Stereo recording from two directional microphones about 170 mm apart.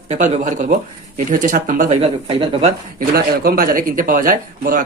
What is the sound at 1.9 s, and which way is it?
Speech, 35° right (ahead or behind).